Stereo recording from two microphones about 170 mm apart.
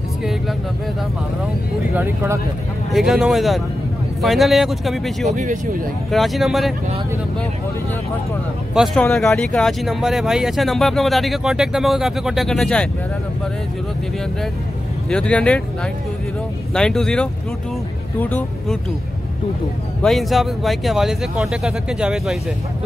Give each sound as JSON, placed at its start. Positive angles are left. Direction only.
{"t": 0.2, "sound": "speech", "side_deg": 0}
{"t": 2.9, "sound": "speech", "side_deg": 0}
{"t": 5.3, "sound": "speech", "side_deg": -45}
{"t": 6.0, "sound": "speech", "side_deg": 0}
{"t": 8.7, "sound": "speech", "side_deg": 0}
{"t": 15.0, "sound": "speech", "side_deg": 5}
{"t": 20.0, "sound": "speech", "side_deg": 0}